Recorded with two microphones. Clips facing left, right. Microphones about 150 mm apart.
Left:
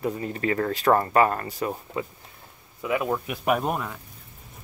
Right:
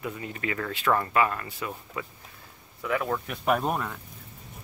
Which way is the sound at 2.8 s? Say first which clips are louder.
Left 3 dB; 15° left (ahead or behind).